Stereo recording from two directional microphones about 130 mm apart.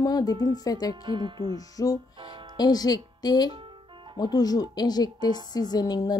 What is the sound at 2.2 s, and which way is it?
Music, 40° right (ahead or behind).